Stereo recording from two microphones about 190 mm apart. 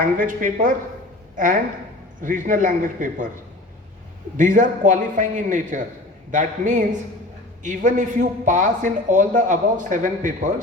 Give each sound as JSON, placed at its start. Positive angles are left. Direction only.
{"t": 0.0, "sound": "a man's voice", "side_deg": -45}
{"t": 2.2, "sound": "a man's voice", "side_deg": -45}
{"t": 4.4, "sound": "a man's voice", "side_deg": -40}